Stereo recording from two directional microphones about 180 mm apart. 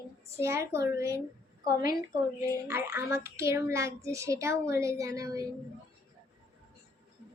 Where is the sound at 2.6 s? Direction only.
15° right (ahead or behind).